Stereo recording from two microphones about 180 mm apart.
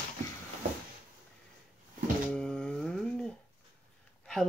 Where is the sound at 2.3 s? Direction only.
5° left (ahead or behind).